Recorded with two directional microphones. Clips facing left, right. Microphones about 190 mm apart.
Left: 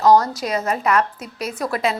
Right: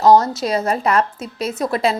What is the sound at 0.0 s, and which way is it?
A woman's voice, 25° right (ahead or behind).